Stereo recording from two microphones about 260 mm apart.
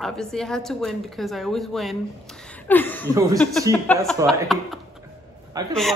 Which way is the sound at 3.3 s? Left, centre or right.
Centre.